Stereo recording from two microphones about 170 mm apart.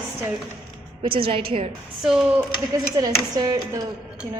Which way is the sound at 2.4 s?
20° right (ahead or behind).